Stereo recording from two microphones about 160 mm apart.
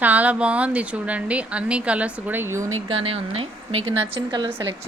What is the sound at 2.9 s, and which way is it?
A woman's voice, 35° right (ahead or behind).